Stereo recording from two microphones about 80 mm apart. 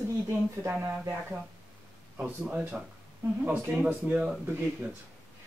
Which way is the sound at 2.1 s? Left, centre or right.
Centre.